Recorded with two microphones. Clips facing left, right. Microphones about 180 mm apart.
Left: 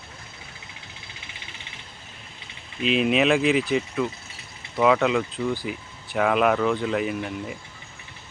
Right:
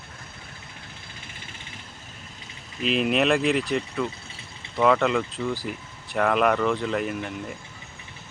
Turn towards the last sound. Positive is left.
turn(degrees=0)  # may be behind; listen again after turning